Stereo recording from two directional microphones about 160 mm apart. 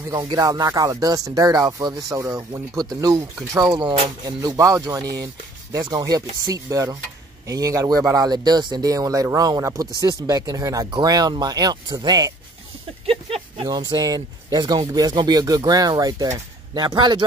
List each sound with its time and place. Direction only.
0.1 s speech: 25° right (ahead or behind)
13.0 s a sound: 35° right (ahead or behind)
13.7 s speech: 25° right (ahead or behind)